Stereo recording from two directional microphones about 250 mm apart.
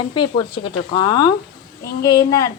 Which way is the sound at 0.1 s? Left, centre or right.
Centre.